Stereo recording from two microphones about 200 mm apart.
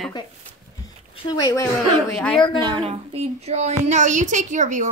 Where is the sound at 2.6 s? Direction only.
25° right (ahead or behind).